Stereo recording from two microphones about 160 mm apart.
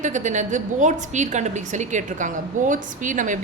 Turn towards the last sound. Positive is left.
turn(degrees=-55)  # may be behind; listen again after turning